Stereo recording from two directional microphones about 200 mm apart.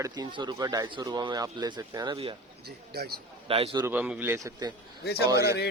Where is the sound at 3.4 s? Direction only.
25° right (ahead or behind).